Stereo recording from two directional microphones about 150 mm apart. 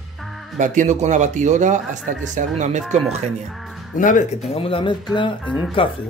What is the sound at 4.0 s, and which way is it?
Speech, 60° left (ahead or behind).